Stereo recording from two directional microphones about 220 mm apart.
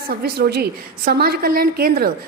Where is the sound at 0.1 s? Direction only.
45° right (ahead or behind).